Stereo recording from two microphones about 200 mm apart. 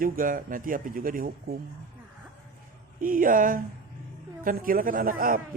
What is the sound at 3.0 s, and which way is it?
A man's voice, 45° right (ahead or behind).